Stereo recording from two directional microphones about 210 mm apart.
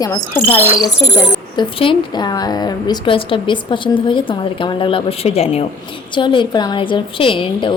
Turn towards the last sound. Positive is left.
turn(degrees=25)  # may be behind; listen again after turning